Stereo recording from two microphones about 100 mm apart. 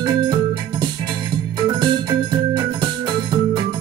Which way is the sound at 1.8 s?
50° right (ahead or behind).